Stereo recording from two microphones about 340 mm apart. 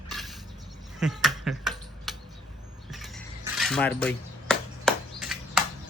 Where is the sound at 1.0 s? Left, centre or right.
Centre.